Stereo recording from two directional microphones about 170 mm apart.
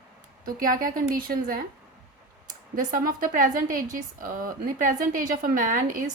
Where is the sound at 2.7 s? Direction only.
55° right (ahead or behind).